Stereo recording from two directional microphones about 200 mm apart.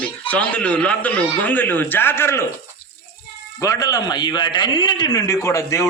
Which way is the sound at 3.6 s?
15° left (ahead or behind).